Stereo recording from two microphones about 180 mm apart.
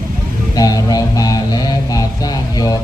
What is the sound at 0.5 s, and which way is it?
Music, 20° left (ahead or behind).